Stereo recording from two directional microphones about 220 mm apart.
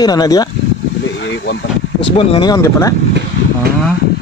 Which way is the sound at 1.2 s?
55° left (ahead or behind).